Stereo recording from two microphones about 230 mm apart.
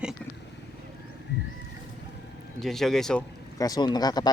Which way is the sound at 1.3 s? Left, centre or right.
Left.